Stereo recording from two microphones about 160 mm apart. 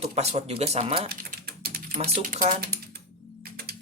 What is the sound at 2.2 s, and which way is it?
Speech, 55° right (ahead or behind).